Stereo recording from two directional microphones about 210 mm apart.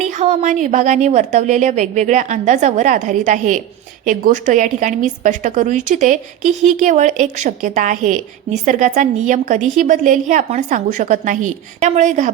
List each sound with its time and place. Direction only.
0.0 s a woman's voice: 35° right (ahead or behind)